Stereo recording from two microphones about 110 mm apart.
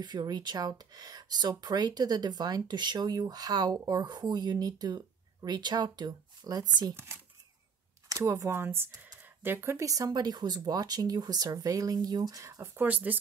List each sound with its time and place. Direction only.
0.0 s speech: 40° right (ahead or behind)
8.1 s speech: 30° right (ahead or behind)
12.8 s speech: 15° right (ahead or behind)